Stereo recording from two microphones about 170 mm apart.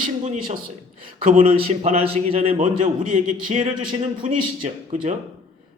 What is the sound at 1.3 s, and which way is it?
A man's voice, 35° right (ahead or behind).